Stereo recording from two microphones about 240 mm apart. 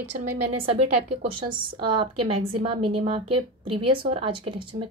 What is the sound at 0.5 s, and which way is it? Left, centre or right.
Speech, right.